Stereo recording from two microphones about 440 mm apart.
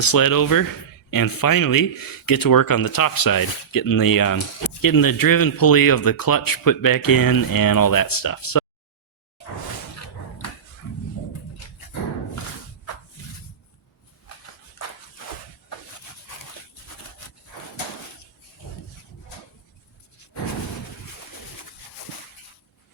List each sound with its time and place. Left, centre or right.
0.0 s speech: left